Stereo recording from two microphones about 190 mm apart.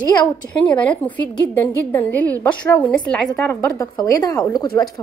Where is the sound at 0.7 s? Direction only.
5° left (ahead or behind).